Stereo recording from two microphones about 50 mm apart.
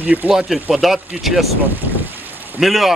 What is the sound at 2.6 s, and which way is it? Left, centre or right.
Speech, centre.